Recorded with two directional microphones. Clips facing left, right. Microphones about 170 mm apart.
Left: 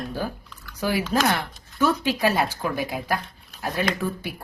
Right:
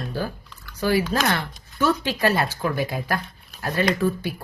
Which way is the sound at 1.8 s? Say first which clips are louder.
Even; 15° left (ahead or behind).